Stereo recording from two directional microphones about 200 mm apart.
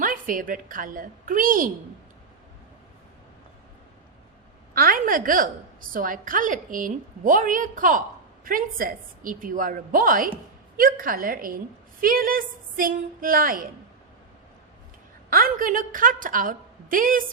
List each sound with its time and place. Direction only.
0.0 s a woman's voice: 45° right (ahead or behind)
4.7 s a woman's voice: 45° right (ahead or behind)
15.3 s a woman's voice: 45° right (ahead or behind)